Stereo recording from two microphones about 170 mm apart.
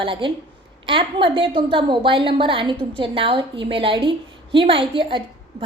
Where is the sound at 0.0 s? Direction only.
30° right (ahead or behind).